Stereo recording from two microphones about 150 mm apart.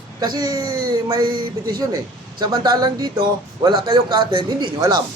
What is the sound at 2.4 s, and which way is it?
Speech, 25° right (ahead or behind).